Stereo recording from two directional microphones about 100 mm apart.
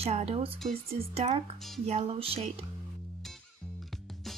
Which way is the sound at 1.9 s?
70° right (ahead or behind).